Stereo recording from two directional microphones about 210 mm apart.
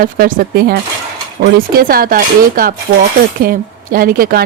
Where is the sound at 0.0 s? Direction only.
40° right (ahead or behind).